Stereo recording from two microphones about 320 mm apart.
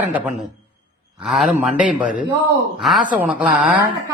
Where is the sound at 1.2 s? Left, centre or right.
Centre.